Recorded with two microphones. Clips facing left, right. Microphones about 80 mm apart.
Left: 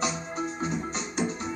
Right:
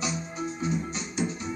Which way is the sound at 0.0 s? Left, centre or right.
Left.